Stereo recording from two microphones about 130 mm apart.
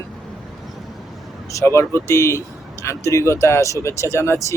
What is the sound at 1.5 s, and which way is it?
Speech, 20° left (ahead or behind).